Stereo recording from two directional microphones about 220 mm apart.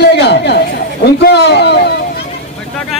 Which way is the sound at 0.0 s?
50° left (ahead or behind).